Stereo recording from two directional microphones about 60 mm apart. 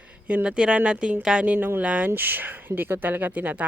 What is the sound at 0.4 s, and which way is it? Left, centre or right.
Speech, centre.